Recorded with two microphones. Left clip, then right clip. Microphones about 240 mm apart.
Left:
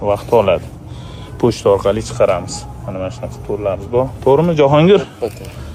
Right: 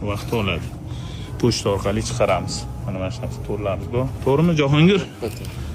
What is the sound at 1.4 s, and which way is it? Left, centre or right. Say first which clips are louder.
Speech: left 6 dB; left.